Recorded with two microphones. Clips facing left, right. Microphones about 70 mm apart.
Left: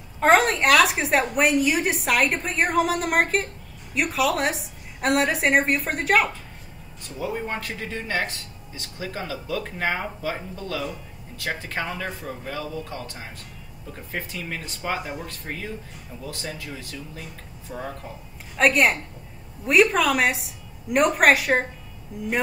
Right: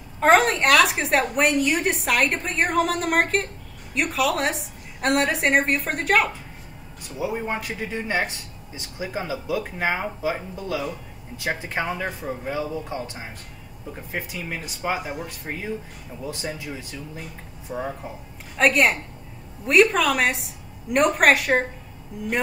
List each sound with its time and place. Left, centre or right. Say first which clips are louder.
0.2 s a woman's voice: right 1 dB; centre
7.0 s speech: right 2 dB; centre
18.6 s a woman's voice: even; centre